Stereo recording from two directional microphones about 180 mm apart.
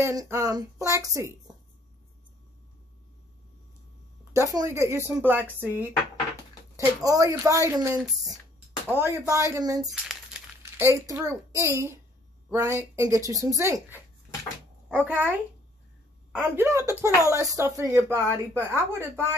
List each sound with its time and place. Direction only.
0.0 s a woman's voice: 15° right (ahead or behind)
4.2 s a woman's voice: 15° right (ahead or behind)
7.0 s a woman's voice: 20° right (ahead or behind)